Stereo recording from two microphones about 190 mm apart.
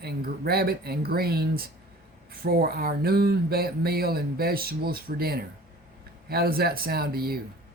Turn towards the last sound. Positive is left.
turn(degrees=-55)  # may be behind; listen again after turning